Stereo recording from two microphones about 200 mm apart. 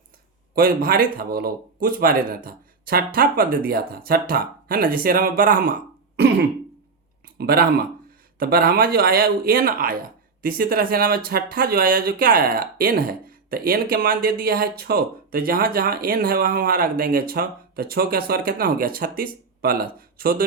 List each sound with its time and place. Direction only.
0.5 s speech: 45° right (ahead or behind)
7.3 s speech: 50° right (ahead or behind)